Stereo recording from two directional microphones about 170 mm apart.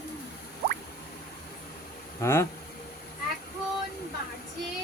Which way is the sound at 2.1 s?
15° left (ahead or behind).